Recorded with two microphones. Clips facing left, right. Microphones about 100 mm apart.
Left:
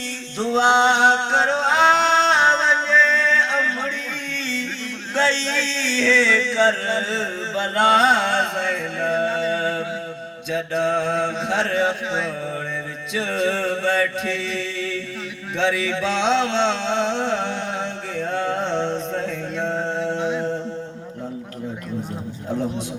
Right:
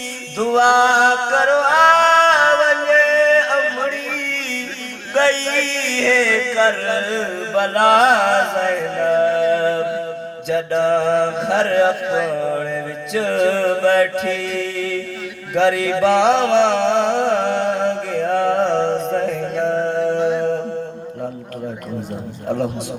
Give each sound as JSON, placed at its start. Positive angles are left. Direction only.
{"t": 0.3, "sound": "a sound", "side_deg": -60}
{"t": 10.5, "sound": "mantra", "side_deg": -60}
{"t": 15.5, "sound": "music", "side_deg": -60}